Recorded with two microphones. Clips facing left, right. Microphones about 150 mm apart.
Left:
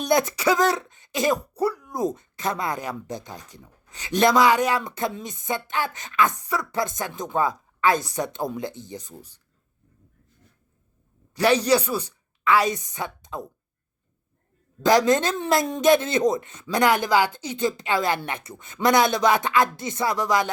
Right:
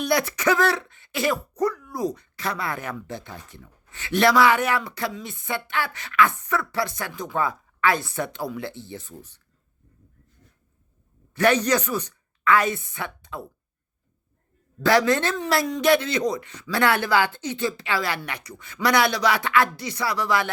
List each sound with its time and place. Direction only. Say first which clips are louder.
0.1 s speech: left 2 dB; 20° left (ahead or behind)
11.3 s a woman's voice: left 1 dB; 10° left (ahead or behind)
14.8 s speech: left 1 dB; 20° left (ahead or behind)